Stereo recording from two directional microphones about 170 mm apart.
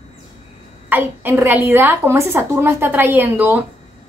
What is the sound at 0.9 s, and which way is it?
A woman's voice, 15° right (ahead or behind).